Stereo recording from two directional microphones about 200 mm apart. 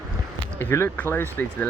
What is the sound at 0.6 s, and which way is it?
Speech, 10° left (ahead or behind).